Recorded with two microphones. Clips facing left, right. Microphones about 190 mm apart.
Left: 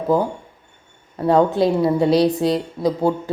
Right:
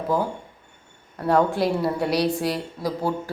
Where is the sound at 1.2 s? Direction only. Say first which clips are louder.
Left 5 dB; 20° left (ahead or behind).